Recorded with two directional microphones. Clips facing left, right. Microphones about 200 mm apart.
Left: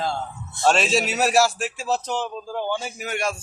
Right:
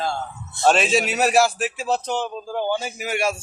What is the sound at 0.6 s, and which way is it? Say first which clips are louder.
A man's voice: right 2 dB; centre (ahead or behind).